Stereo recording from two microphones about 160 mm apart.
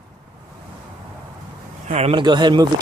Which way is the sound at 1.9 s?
40° right (ahead or behind).